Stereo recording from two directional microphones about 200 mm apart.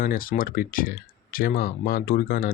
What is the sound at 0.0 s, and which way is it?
Speech, 45° left (ahead or behind).